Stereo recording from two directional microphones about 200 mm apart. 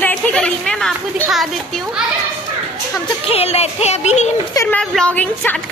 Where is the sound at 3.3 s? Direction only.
30° left (ahead or behind).